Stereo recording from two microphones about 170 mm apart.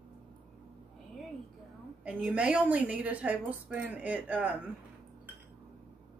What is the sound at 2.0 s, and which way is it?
A woman's voice, 5° right (ahead or behind).